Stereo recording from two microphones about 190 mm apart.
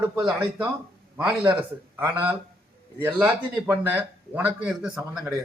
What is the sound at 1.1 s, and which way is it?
A man's voice, 10° right (ahead or behind).